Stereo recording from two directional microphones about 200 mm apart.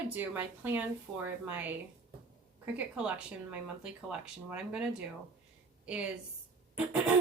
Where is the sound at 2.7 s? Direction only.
5° right (ahead or behind).